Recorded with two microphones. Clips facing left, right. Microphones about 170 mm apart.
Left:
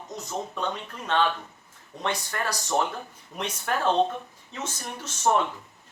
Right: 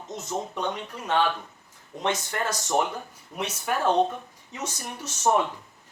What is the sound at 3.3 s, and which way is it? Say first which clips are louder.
Speech: right 1 dB; 10° right (ahead or behind).